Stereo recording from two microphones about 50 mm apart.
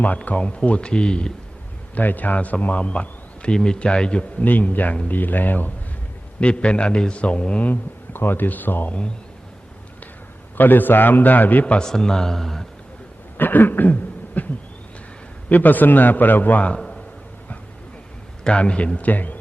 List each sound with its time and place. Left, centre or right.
0.3 s a man's voice: left
2.0 s a man's voice: left; by 4.4 s centre
4.4 s a man's voice: left
6.4 s a man's voice: left
7.7 s a man's voice: left
10.6 s a man's voice: left
11.8 s speech: centre
13.3 s a sound: left
15.4 s a man's voice: left
16.7 s a sound: centre
18.4 s a man's voice: left